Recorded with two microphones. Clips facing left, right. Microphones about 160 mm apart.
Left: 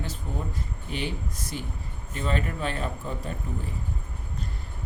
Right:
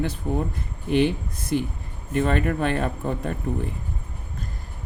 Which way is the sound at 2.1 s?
60° right (ahead or behind).